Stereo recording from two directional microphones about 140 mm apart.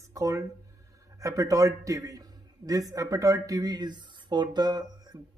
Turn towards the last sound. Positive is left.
turn(degrees=-30)  # may be behind; listen again after turning